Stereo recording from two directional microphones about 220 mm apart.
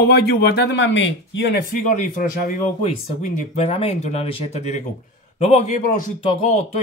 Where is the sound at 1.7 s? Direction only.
35° left (ahead or behind).